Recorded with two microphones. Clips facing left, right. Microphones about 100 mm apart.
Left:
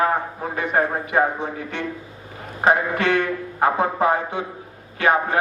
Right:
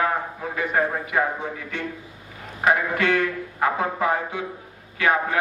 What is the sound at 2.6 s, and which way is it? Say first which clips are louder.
A man's voice: left 2 dB; 30° left (ahead or behind).